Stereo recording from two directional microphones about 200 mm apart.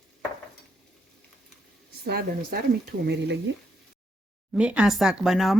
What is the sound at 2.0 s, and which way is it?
Speech, 50° right (ahead or behind).